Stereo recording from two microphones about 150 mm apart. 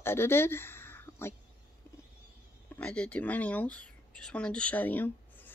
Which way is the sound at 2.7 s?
10° left (ahead or behind).